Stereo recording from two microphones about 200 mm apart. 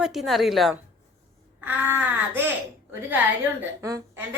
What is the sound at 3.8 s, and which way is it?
Speech, 15° right (ahead or behind).